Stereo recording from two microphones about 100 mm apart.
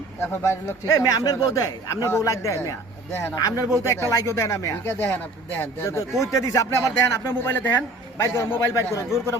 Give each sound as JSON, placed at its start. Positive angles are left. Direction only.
{"t": 0.2, "sound": "speech", "side_deg": 25}
{"t": 0.9, "sound": "a man's voice", "side_deg": 35}
{"t": 3.1, "sound": "speech", "side_deg": 20}
{"t": 3.3, "sound": "a man's voice", "side_deg": 40}